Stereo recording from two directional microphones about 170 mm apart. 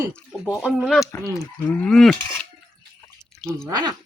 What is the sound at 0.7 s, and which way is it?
Speech, centre (ahead or behind).